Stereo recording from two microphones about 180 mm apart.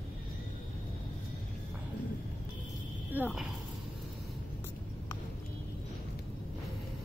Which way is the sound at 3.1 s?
5° right (ahead or behind).